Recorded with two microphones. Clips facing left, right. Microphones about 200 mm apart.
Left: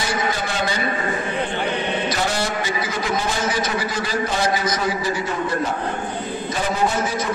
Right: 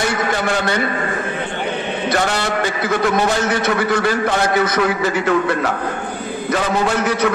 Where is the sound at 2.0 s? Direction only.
65° right (ahead or behind).